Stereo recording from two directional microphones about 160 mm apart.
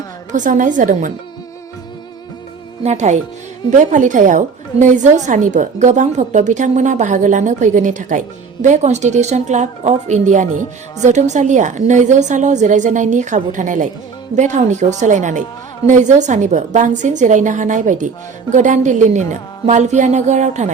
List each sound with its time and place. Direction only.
0.3 s a woman's voice: 50° right (ahead or behind)
2.8 s a woman's voice: 45° right (ahead or behind)